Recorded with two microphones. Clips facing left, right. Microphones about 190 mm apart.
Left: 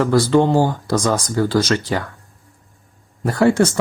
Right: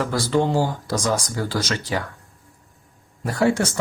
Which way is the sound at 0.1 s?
60° left (ahead or behind).